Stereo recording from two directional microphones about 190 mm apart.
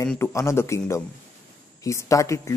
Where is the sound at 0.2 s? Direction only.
15° left (ahead or behind).